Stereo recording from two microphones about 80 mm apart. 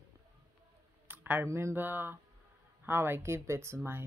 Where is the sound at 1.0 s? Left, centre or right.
Right.